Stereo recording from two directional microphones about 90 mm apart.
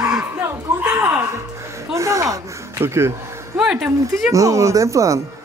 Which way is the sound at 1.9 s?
35° right (ahead or behind).